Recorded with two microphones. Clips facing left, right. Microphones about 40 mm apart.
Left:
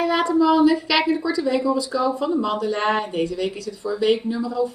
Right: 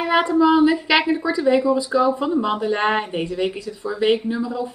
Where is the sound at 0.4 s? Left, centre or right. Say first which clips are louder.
Even; right.